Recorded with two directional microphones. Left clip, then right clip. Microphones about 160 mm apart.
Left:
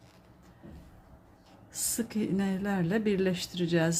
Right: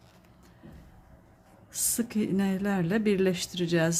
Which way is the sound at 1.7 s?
15° right (ahead or behind).